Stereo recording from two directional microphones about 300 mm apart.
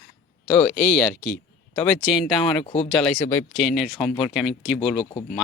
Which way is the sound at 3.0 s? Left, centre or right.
Centre.